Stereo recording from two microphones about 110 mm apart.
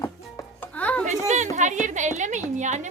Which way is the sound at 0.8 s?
15° left (ahead or behind).